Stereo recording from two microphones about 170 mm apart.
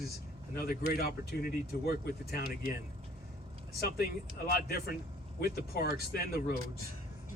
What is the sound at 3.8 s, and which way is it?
Speech, 65° left (ahead or behind).